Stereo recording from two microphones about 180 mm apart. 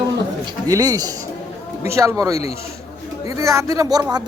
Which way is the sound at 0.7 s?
20° right (ahead or behind).